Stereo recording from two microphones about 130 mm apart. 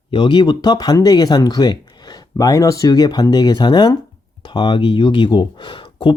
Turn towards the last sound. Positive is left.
turn(degrees=40)  # may be behind; listen again after turning